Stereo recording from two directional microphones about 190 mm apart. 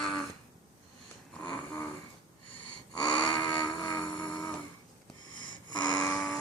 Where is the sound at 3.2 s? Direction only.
20° left (ahead or behind).